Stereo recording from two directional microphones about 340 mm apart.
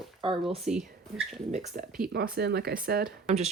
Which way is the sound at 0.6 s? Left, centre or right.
Centre.